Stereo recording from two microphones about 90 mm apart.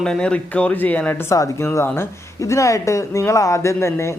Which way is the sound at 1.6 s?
25° left (ahead or behind).